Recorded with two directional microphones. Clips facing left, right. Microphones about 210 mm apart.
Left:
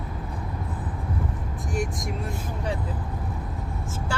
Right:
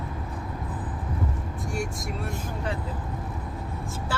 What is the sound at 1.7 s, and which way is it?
Speech, 20° left (ahead or behind).